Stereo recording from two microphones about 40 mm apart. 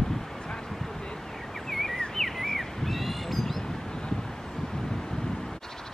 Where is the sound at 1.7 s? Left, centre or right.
Centre.